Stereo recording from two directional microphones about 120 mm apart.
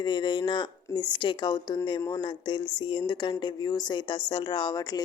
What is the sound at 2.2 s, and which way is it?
A woman's voice, 45° left (ahead or behind).